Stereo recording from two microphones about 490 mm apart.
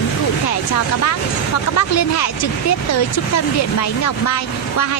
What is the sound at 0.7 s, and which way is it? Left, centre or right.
A woman's voice, left.